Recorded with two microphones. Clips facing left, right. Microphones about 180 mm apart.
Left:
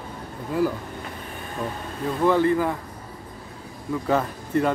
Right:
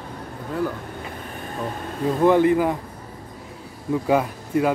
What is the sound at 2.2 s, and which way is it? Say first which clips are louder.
Speech: right 3 dB; 15° right (ahead or behind).